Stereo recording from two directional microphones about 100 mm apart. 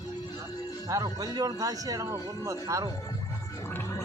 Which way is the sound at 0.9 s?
40° right (ahead or behind).